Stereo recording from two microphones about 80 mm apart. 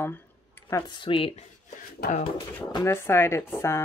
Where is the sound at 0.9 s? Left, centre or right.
Left.